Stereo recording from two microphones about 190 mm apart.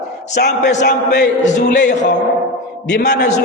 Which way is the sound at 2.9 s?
65° left (ahead or behind).